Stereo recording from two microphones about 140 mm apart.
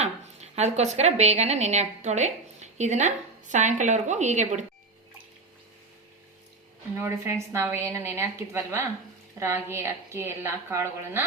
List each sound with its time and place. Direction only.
0.0 s a woman's voice: 50° right (ahead or behind)
6.9 s a woman's voice: 20° right (ahead or behind)